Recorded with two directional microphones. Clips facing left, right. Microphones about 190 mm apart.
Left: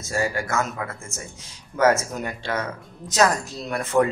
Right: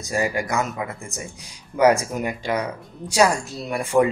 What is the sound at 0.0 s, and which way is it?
Speech, 15° right (ahead or behind).